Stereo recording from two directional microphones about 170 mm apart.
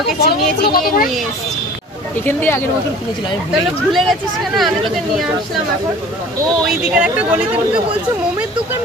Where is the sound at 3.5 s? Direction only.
Centre (ahead or behind).